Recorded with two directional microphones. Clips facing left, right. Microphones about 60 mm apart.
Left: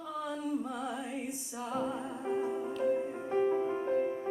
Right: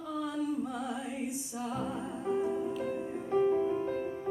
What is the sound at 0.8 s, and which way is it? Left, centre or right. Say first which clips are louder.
Music: right 1 dB; left.